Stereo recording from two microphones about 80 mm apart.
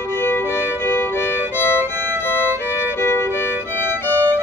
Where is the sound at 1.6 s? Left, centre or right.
Left.